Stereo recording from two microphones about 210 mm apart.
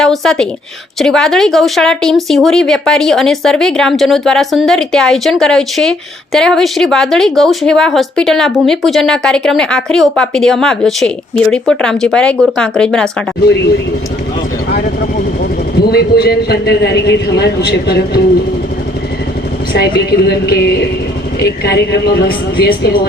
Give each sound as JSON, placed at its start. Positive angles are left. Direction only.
{"t": 0.0, "sound": "a woman's voice", "side_deg": 0}
{"t": 13.4, "sound": "a man's voice", "side_deg": 50}
{"t": 15.9, "sound": "a man's voice", "side_deg": 50}
{"t": 19.7, "sound": "a man's voice", "side_deg": 50}